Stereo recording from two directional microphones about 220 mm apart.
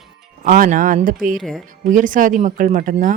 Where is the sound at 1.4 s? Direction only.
Centre (ahead or behind).